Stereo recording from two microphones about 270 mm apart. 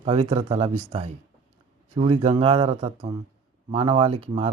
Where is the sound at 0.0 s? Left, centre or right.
Right.